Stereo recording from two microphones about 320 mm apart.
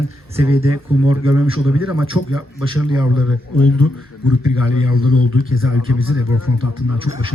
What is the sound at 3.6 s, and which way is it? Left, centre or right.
Speech, left.